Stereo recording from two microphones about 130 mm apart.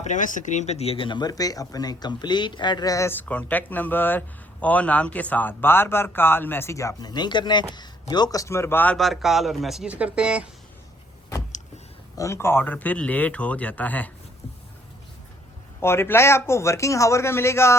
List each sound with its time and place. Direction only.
0.0 s speech: 75° left (ahead or behind); by 9.0 s 15° left (ahead or behind)
9.0 s speech: centre (ahead or behind)
12.1 s speech: 25° left (ahead or behind)
15.8 s speech: 20° left (ahead or behind)